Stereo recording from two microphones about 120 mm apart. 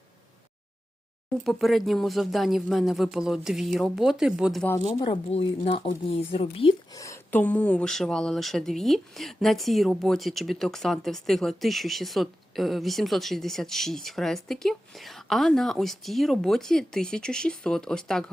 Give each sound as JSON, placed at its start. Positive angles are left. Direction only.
{"t": 1.5, "sound": "speech", "side_deg": 0}
{"t": 4.9, "sound": "speech", "side_deg": 50}
{"t": 6.9, "sound": "a sound", "side_deg": 25}
{"t": 7.3, "sound": "speech", "side_deg": 10}